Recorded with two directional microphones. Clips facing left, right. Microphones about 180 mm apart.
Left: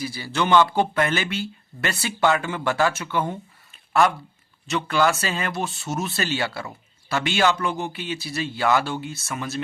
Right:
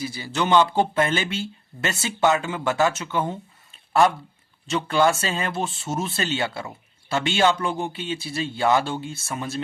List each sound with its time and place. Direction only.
0.0 s speech: 20° right (ahead or behind)
4.7 s speech: 25° right (ahead or behind)